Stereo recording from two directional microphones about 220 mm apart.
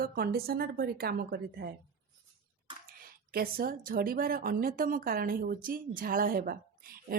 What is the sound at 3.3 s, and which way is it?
A woman's voice, 40° right (ahead or behind).